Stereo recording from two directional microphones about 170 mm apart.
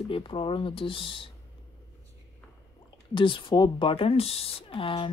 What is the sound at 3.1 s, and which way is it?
Speech, 30° left (ahead or behind).